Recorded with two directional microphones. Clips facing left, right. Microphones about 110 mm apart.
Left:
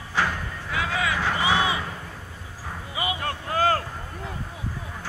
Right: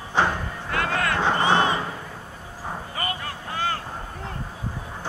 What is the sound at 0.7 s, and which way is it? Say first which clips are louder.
Vehicle: right 2 dB; centre (ahead or behind).